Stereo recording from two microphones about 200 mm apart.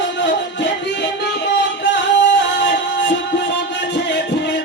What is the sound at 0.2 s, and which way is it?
Music, 60° left (ahead or behind).